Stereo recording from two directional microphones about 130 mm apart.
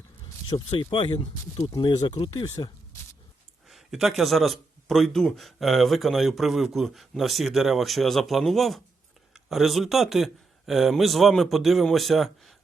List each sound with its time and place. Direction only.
0.5 s speech: 40° left (ahead or behind)
1.2 s speech: 25° left (ahead or behind)
3.7 s speech: centre (ahead or behind)